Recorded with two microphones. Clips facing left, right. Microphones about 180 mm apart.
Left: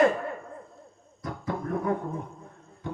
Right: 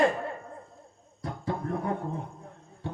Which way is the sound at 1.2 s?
30° right (ahead or behind).